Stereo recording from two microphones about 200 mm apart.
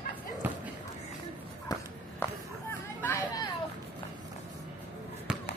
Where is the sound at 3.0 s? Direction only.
15° left (ahead or behind).